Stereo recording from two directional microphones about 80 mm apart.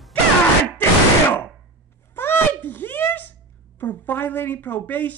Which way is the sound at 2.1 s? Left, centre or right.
Left.